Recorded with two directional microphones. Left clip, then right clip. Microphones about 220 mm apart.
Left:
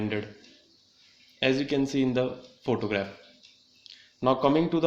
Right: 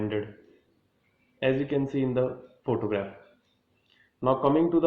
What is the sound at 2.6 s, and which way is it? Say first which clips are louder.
Speech: even; 50° left (ahead or behind).